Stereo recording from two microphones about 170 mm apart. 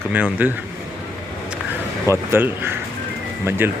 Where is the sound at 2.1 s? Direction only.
15° right (ahead or behind).